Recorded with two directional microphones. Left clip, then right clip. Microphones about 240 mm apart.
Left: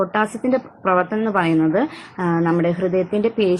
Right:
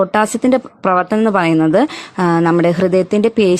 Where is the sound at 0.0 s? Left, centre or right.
Right.